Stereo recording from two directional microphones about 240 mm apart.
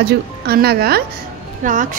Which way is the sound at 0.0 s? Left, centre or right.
Right.